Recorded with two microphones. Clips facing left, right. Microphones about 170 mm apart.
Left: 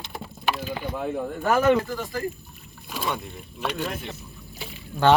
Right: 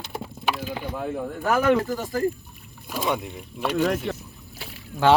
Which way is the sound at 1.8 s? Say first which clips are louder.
Right 3 dB; 40° right (ahead or behind).